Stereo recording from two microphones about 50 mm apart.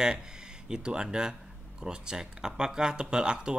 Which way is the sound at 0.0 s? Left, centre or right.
Centre.